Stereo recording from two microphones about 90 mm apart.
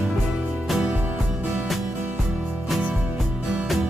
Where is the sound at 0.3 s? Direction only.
10° right (ahead or behind).